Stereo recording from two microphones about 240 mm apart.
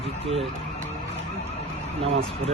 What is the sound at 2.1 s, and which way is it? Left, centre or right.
Speech, right.